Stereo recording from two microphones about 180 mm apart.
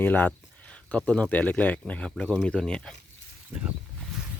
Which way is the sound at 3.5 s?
5° right (ahead or behind).